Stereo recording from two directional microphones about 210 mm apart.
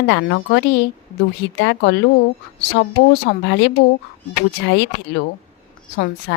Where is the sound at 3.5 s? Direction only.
55° left (ahead or behind).